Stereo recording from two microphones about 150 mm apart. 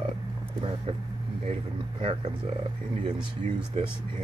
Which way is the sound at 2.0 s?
40° right (ahead or behind).